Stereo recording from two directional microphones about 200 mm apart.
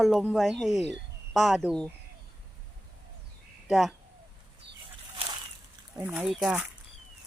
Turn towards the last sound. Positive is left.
turn(degrees=-5)  # may be behind; listen again after turning